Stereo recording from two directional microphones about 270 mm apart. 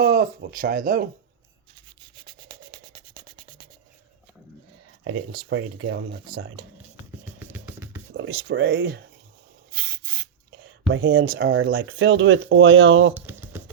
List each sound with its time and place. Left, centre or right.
0.0 s speech: right
2.2 s a sound: centre
5.3 s speech: right
7.3 s music: centre
8.1 s speech: right
10.9 s speech: right
13.1 s a sound: centre